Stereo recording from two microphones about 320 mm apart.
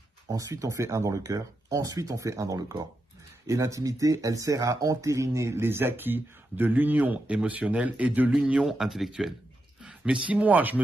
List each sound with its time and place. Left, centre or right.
0.3 s speech: centre